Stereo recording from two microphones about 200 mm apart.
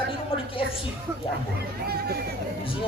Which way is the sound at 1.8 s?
50° right (ahead or behind).